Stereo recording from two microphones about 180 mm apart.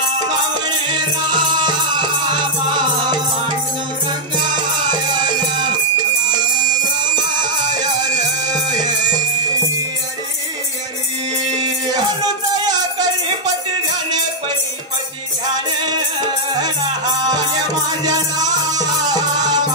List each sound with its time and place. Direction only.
0.7 s music: 25° right (ahead or behind)
7.4 s music: 25° right (ahead or behind)
18.0 s music: 20° right (ahead or behind)